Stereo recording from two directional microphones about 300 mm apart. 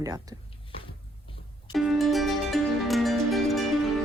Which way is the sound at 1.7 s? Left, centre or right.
Centre.